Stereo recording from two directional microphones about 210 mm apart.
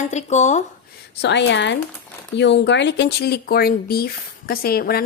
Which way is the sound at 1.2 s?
55° left (ahead or behind).